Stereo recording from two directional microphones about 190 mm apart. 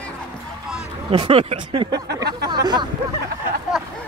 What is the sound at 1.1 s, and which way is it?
Speech, 30° right (ahead or behind).